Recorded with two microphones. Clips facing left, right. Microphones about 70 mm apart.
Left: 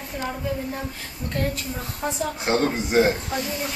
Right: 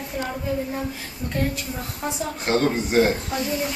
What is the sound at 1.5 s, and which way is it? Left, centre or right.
Speech, centre.